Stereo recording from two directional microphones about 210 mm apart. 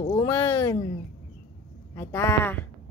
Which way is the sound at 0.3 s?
10° left (ahead or behind).